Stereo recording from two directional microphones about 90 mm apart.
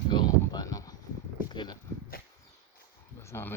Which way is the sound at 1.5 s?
55° left (ahead or behind).